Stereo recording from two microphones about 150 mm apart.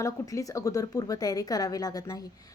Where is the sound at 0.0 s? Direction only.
20° left (ahead or behind).